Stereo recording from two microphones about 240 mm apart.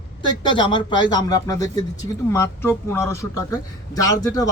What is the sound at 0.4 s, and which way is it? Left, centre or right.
Speech, centre.